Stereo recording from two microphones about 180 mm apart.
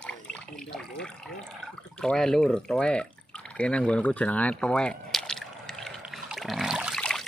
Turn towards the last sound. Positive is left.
turn(degrees=0)  # may be behind; listen again after turning